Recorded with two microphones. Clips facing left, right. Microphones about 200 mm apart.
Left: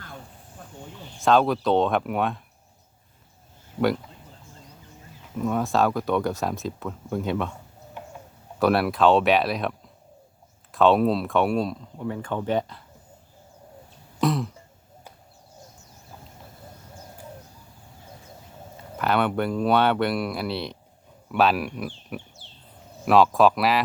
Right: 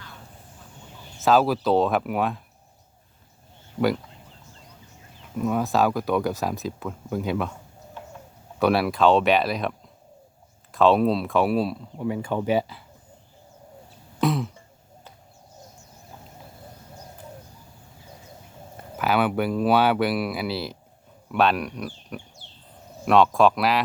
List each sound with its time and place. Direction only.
1.2 s speech: 5° right (ahead or behind)
5.4 s speech: centre (ahead or behind)
8.0 s tick-tock: 15° left (ahead or behind)
8.5 s speech: centre (ahead or behind)
14.2 s cough: centre (ahead or behind)
18.9 s speech: 5° right (ahead or behind)